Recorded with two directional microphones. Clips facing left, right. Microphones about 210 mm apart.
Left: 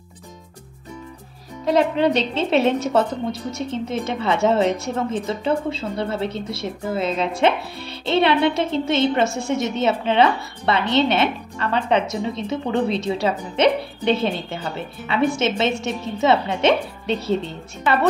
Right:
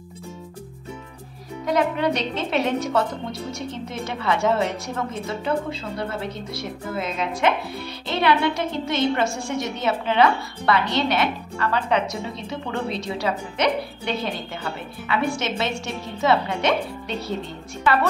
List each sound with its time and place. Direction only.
1.7 s a woman's voice: 25° left (ahead or behind)